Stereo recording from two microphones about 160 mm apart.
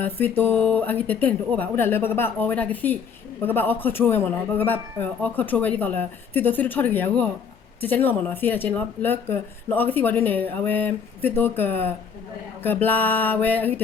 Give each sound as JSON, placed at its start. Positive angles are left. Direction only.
{"t": 0.0, "sound": "speech", "side_deg": 10}